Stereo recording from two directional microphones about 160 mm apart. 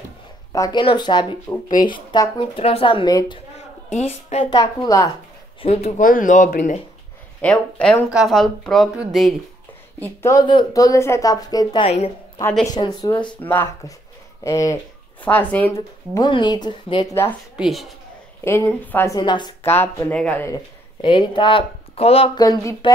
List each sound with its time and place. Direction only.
0.5 s a woman's voice: 25° left (ahead or behind)
3.9 s speech: 40° left (ahead or behind)
4.5 s a woman's voice: 25° left (ahead or behind)
5.6 s speech: 40° left (ahead or behind)
7.4 s speech: 5° left (ahead or behind)
10.4 s a woman's voice: 25° left (ahead or behind)
13.4 s a woman's voice: 10° left (ahead or behind)
16.2 s a woman's voice: 30° left (ahead or behind)
17.6 s speech: centre (ahead or behind)
18.4 s speech: 15° left (ahead or behind)
19.1 s a woman's voice: 25° left (ahead or behind)
19.6 s speech: 15° left (ahead or behind)
21.0 s speech: 30° left (ahead or behind)
22.4 s a woman's voice: 20° left (ahead or behind)